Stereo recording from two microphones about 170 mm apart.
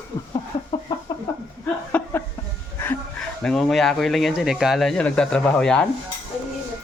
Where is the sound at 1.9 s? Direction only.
15° left (ahead or behind).